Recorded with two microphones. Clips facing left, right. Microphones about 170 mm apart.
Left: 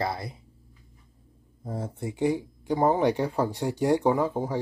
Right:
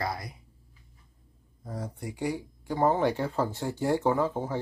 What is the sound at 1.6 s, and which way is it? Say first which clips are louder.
Speech: left 4 dB; 25° left (ahead or behind).